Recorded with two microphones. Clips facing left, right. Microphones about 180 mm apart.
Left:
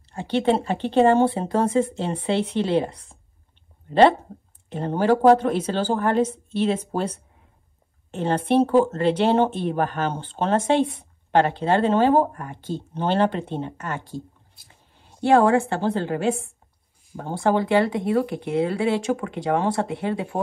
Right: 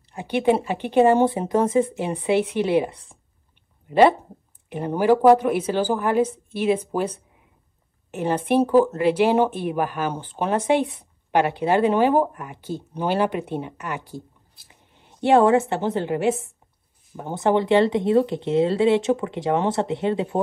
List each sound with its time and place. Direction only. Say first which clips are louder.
0.1 s speech: right 1 dB; 15° right (ahead or behind)
4.6 s speech: right 1 dB; 10° right (ahead or behind)
8.1 s a woman's voice: even; 10° right (ahead or behind)